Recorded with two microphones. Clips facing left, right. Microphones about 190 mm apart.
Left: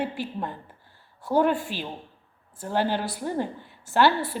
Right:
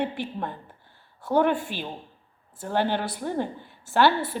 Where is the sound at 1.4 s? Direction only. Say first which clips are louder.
Even; 55° right (ahead or behind).